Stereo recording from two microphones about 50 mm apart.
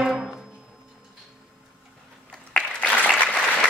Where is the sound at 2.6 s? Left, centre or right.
Left.